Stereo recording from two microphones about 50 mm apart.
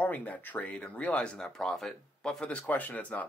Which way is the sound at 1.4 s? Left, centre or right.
Centre.